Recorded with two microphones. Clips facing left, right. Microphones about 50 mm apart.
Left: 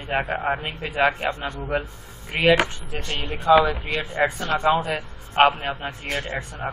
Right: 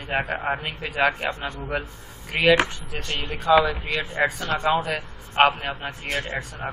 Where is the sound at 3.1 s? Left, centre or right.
Centre.